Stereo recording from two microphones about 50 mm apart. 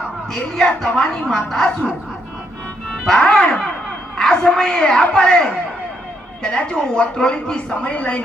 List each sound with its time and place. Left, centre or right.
0.5 s a man's voice: centre
3.0 s dog: centre
4.4 s a man's voice: centre
7.8 s speech: left